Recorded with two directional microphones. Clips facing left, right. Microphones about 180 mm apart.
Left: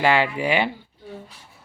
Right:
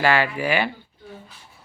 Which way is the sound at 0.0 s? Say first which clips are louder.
Left 1 dB; 20° left (ahead or behind).